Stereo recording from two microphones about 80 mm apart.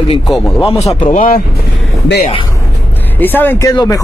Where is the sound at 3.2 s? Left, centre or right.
Left.